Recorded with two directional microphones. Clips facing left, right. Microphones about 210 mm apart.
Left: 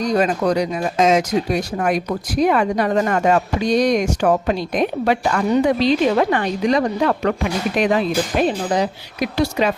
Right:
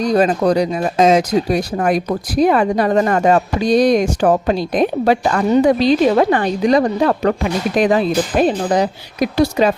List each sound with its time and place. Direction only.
0.0 s speech: 35° right (ahead or behind)